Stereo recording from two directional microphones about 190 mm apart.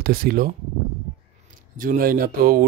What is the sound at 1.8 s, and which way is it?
Speech, 50° right (ahead or behind).